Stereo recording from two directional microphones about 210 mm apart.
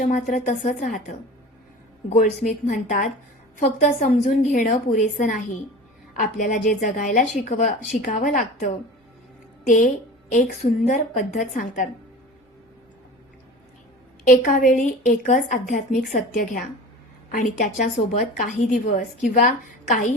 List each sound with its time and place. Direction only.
0.0 s a woman's voice: 35° left (ahead or behind)
2.0 s a woman's voice: 35° left (ahead or behind)
14.3 s a woman's voice: 40° left (ahead or behind)